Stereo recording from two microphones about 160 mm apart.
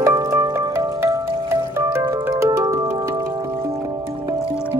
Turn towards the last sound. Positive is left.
turn(degrees=-25)  # may be behind; listen again after turning